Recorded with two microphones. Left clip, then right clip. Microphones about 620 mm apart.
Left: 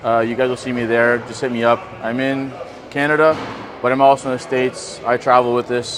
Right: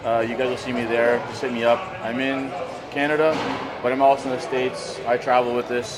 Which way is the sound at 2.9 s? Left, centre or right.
Left.